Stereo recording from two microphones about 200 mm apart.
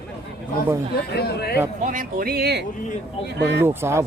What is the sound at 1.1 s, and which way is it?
Speech, 55° left (ahead or behind).